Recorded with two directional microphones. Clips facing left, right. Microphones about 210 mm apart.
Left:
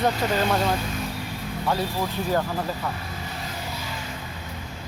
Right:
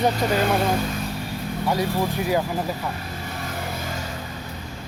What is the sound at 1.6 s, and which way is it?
Speech, 15° right (ahead or behind).